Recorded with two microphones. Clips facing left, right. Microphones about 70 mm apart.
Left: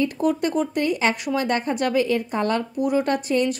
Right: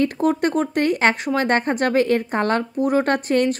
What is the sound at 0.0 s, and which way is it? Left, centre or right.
A woman's voice, right.